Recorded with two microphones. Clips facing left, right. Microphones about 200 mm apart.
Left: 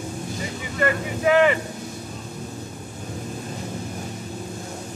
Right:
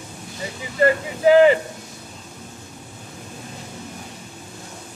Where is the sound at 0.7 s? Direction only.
30° right (ahead or behind).